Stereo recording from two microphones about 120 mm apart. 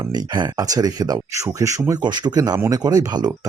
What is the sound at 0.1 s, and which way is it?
Speech, 35° right (ahead or behind).